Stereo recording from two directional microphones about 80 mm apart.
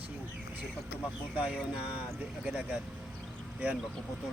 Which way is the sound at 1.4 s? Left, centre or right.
Centre.